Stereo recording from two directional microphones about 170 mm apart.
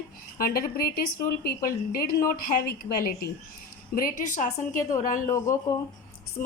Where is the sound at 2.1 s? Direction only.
60° left (ahead or behind).